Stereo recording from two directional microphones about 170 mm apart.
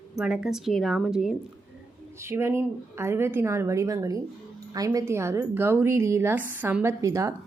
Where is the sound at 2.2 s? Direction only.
15° right (ahead or behind).